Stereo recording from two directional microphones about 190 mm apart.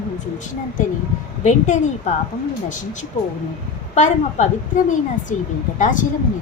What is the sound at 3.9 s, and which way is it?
A woman's voice, 35° left (ahead or behind).